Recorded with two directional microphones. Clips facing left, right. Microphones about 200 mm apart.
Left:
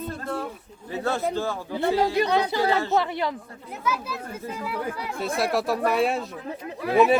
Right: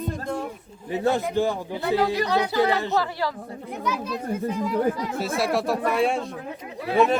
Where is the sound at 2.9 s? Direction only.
20° left (ahead or behind).